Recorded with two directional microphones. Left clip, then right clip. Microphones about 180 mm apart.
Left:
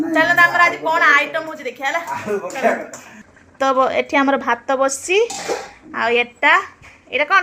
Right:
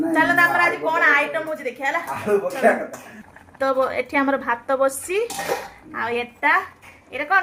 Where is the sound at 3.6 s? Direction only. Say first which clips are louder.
Left 5 dB; 25° left (ahead or behind).